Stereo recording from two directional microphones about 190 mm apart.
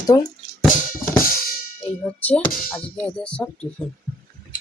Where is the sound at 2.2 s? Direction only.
10° left (ahead or behind).